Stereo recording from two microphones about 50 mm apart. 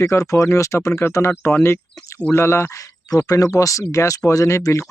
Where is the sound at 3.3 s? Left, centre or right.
Left.